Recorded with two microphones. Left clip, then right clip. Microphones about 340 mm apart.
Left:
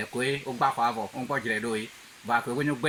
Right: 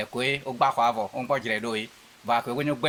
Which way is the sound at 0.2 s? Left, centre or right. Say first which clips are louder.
Right 2 dB; centre.